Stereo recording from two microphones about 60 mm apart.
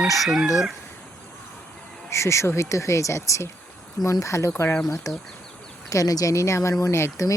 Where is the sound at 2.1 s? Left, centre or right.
Left.